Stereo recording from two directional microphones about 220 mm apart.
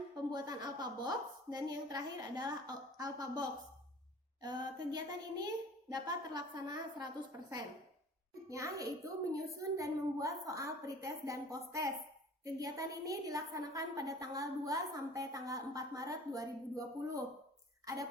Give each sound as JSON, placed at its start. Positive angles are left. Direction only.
{"t": 0.3, "sound": "a woman's voice", "side_deg": -20}
{"t": 8.4, "sound": "a woman's voice", "side_deg": -15}